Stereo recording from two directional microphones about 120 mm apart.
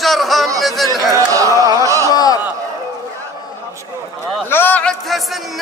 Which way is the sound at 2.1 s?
35° left (ahead or behind).